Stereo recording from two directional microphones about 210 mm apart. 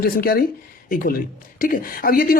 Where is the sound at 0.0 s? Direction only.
45° left (ahead or behind).